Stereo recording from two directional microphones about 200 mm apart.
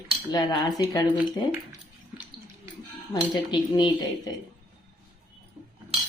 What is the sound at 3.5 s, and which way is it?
Speech, 25° left (ahead or behind).